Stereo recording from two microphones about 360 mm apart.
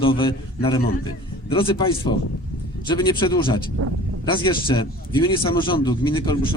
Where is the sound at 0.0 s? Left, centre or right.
Centre.